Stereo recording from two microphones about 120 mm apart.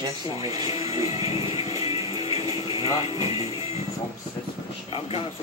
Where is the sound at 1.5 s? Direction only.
30° right (ahead or behind).